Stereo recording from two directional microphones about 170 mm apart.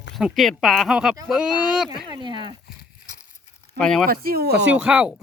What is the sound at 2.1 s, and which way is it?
Speech, 30° right (ahead or behind).